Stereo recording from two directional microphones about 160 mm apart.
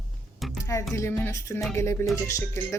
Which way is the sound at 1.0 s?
15° left (ahead or behind).